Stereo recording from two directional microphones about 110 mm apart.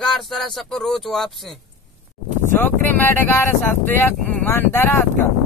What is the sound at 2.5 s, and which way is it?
Speech, 20° left (ahead or behind).